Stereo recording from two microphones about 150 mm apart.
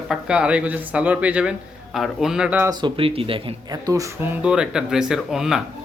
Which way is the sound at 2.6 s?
30° right (ahead or behind).